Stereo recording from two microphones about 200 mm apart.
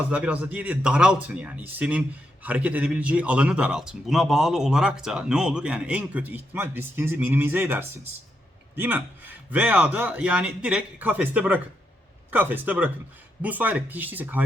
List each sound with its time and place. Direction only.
0.1 s speech: 5° right (ahead or behind)